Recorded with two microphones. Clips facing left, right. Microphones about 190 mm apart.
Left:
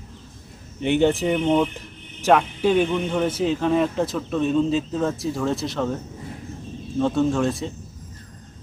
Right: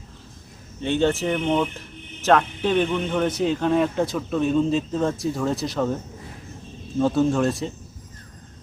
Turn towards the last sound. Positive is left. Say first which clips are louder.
# right 1 dB
turn(degrees=0)  # may be behind; listen again after turning